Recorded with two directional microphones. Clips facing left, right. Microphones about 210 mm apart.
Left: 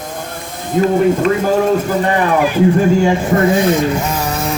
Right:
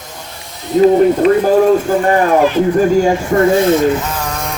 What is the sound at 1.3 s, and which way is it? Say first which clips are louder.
Speech: right 4 dB; 40° right (ahead or behind).